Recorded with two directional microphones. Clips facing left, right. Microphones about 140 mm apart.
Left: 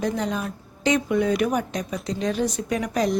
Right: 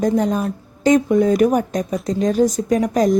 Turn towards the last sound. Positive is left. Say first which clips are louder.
# right 7 dB
turn(degrees=-45)  # may be behind; listen again after turning